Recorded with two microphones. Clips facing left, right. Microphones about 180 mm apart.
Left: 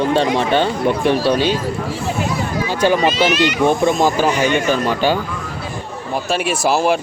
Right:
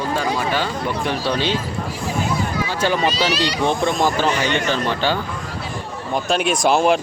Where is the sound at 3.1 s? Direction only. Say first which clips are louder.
Left 5 dB; 35° right (ahead or behind).